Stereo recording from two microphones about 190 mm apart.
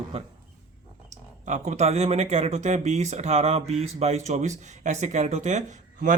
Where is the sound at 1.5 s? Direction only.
35° right (ahead or behind).